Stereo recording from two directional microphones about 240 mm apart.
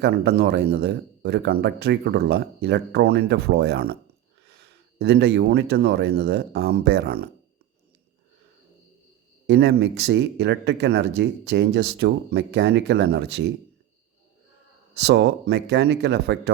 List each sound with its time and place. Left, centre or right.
0.0 s speech: right
9.5 s speech: right
15.0 s speech: right